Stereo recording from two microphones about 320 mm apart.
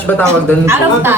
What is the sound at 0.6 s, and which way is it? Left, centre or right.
Speech, centre.